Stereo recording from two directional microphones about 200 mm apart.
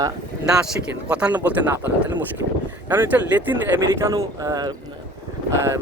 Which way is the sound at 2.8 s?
10° right (ahead or behind).